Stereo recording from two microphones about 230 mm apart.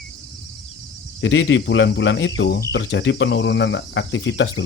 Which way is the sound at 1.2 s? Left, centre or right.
Left.